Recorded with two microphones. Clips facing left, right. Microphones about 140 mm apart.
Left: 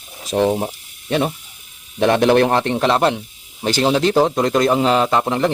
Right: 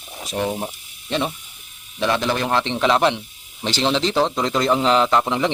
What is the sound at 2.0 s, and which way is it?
Speech, 55° left (ahead or behind).